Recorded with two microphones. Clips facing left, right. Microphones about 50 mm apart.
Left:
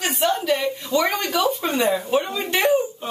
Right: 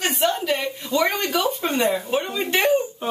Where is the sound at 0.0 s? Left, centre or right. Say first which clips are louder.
Even; centre.